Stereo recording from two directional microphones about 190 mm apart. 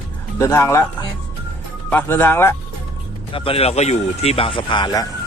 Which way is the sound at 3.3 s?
30° left (ahead or behind).